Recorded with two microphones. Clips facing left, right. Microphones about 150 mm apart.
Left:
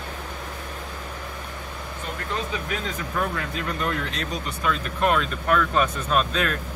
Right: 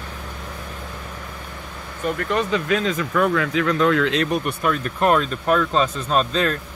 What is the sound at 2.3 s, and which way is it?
Speech, 75° right (ahead or behind).